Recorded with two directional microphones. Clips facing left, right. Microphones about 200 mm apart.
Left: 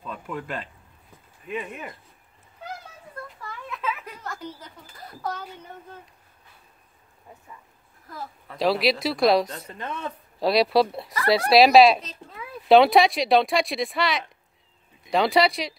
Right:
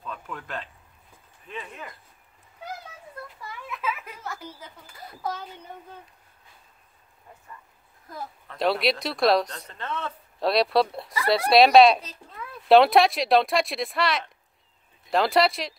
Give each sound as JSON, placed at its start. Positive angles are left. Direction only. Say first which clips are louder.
{"t": 0.0, "sound": "a sound", "louder": "left 4 dB", "side_deg": 10}
{"t": 1.5, "sound": "speech", "louder": "left 6 dB", "side_deg": 15}
{"t": 3.3, "sound": "a sound", "louder": "even", "side_deg": -5}
{"t": 8.5, "sound": "speech", "louder": "left 2 dB", "side_deg": 0}
{"t": 9.8, "sound": "speech", "louder": "right 1 dB", "side_deg": 15}
{"t": 10.4, "sound": "speech", "louder": "left 2 dB", "side_deg": 0}